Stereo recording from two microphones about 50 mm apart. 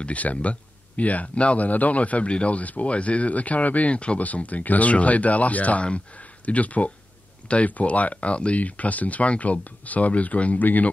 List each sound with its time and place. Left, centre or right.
0.0 s speech: left